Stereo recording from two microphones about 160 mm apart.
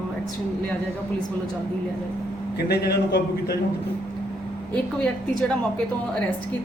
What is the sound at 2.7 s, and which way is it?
Speech, 85° left.